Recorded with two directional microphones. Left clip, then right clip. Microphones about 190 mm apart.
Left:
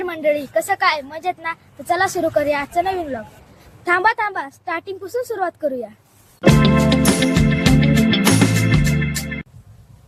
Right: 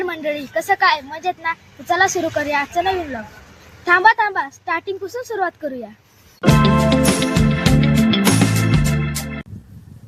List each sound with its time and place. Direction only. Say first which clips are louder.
0.0 s speech: left 3 dB; 30° left (ahead or behind)
6.4 s music: even; centre (ahead or behind)